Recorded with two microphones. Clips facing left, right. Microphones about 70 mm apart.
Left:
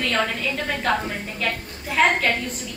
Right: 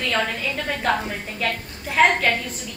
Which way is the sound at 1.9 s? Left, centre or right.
Centre.